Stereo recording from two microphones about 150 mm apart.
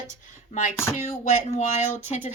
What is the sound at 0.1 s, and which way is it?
Speech, 55° left (ahead or behind).